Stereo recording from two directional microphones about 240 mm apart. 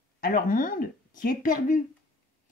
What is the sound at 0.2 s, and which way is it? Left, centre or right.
Speech, left.